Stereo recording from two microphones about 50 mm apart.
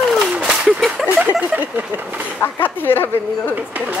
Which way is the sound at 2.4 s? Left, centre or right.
Left.